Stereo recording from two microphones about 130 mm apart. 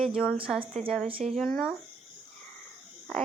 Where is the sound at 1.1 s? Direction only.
45° right (ahead or behind).